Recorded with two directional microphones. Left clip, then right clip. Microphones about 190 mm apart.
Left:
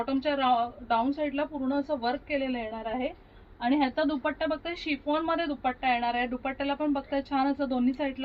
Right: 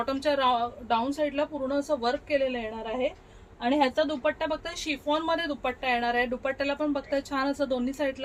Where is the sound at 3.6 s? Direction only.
30° right (ahead or behind).